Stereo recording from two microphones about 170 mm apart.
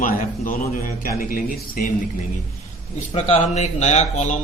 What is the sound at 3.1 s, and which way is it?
A man's voice, 40° left (ahead or behind).